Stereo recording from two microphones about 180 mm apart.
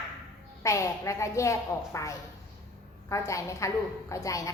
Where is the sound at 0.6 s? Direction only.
15° left (ahead or behind).